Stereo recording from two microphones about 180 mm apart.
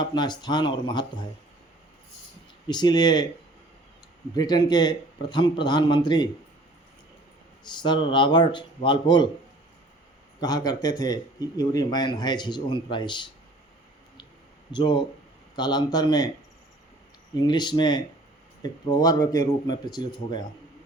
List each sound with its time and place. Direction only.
0.0 s speech: 25° left (ahead or behind)
2.6 s speech: 25° left (ahead or behind)
4.4 s speech: 25° left (ahead or behind)
7.6 s speech: 25° left (ahead or behind)
10.4 s speech: 20° left (ahead or behind)
14.7 s speech: 25° left (ahead or behind)
17.3 s speech: 25° left (ahead or behind)